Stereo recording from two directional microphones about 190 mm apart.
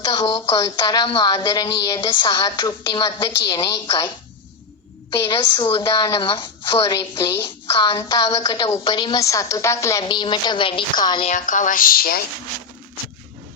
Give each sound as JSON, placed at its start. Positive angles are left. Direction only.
{"t": 0.0, "sound": "speech", "side_deg": 20}
{"t": 5.2, "sound": "speech", "side_deg": 25}
{"t": 11.3, "sound": "speech", "side_deg": 45}